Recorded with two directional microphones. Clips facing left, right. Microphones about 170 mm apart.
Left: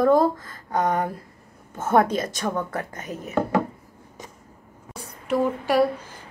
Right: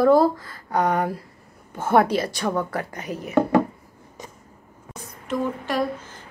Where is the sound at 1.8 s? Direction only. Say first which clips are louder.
Right 1 dB; 30° right (ahead or behind).